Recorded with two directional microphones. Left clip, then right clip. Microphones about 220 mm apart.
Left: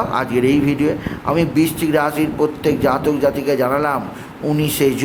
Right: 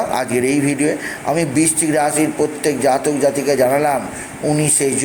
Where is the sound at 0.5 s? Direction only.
50° left (ahead or behind).